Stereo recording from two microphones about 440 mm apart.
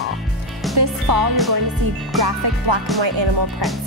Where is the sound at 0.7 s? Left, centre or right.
Right.